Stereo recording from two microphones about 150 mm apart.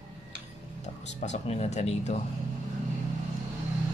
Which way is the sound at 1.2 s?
50° left (ahead or behind).